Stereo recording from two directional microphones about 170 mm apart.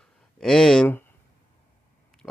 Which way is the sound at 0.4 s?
Centre (ahead or behind).